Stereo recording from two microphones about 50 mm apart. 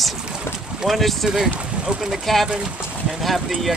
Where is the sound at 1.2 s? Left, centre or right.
Centre.